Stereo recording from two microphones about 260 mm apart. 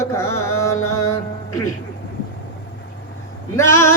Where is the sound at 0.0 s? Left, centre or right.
Centre.